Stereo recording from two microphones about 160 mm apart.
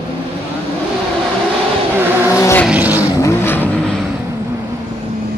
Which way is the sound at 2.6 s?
10° right (ahead or behind).